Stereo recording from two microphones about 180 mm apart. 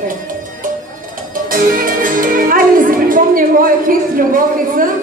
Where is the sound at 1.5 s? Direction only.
50° right (ahead or behind).